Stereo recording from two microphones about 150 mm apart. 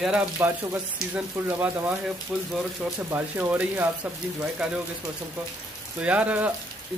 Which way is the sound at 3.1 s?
15° right (ahead or behind).